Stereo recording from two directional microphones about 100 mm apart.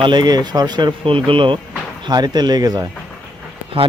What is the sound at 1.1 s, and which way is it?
Speech, 65° right (ahead or behind).